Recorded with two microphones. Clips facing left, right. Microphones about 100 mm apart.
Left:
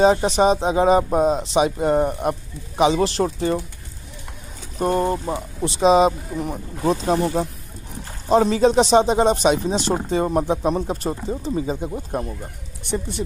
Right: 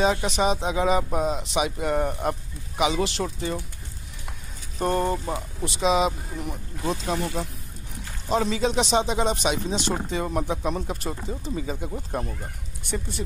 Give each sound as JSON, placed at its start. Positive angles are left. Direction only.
{"t": 0.0, "sound": "speech", "side_deg": 40}
{"t": 2.0, "sound": "speech", "side_deg": 20}
{"t": 2.8, "sound": "speech", "side_deg": 35}
{"t": 4.7, "sound": "speech", "side_deg": 10}
{"t": 5.3, "sound": "speech", "side_deg": 30}
{"t": 11.9, "sound": "speech", "side_deg": 15}